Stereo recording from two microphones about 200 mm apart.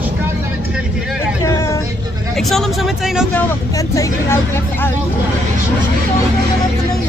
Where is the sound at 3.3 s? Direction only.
10° left (ahead or behind).